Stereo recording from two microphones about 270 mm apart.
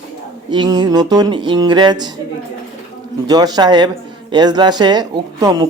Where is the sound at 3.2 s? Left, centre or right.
Centre.